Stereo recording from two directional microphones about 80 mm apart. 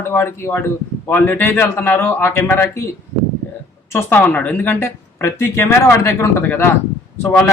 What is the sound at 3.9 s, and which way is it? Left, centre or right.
Speech, left.